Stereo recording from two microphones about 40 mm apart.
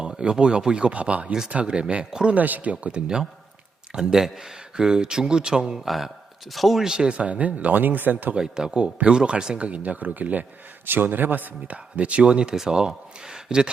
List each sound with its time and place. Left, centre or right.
0.1 s speech: right
2.0 s a man's voice: centre
2.3 s speech: right
3.9 s speech: centre
6.5 s speech: centre
6.8 s speech: right
8.4 s a man's voice: centre; by 10.4 s right
10.8 s speech: right
11.9 s speech: right